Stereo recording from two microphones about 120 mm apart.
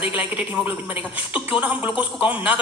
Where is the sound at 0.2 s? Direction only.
15° right (ahead or behind).